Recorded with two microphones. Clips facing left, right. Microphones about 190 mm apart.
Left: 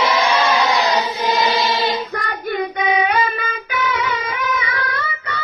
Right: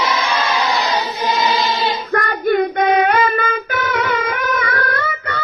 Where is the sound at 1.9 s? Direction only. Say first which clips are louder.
Right 3 dB; 50° right (ahead or behind).